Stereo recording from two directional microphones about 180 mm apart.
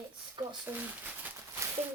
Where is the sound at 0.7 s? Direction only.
10° right (ahead or behind).